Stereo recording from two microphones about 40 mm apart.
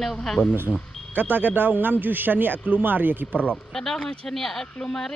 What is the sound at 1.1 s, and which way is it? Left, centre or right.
Speech, right.